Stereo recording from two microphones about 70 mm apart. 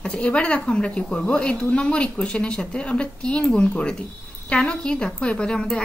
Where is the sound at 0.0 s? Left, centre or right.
Centre.